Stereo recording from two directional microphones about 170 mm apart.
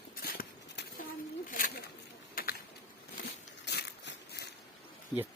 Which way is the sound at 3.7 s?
75° left (ahead or behind).